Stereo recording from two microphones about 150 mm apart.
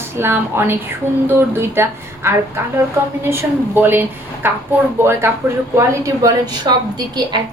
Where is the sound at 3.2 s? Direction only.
15° right (ahead or behind).